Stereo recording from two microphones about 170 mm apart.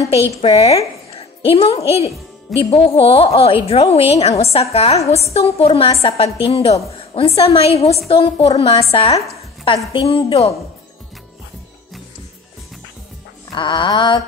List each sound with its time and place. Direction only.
0.4 s a woman's voice: 35° left (ahead or behind)
1.1 s music: 35° left (ahead or behind)
1.9 s a woman's voice: 35° left (ahead or behind)
13.5 s a sound: 25° left (ahead or behind)